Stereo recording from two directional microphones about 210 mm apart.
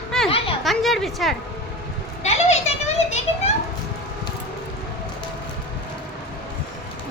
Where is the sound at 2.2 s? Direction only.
30° left (ahead or behind).